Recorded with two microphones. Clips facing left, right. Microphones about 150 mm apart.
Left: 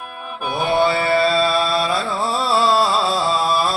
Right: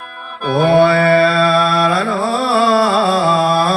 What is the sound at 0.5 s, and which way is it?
Mantra, 55° right (ahead or behind).